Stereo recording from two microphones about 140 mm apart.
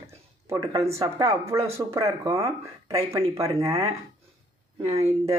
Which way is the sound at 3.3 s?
20° right (ahead or behind).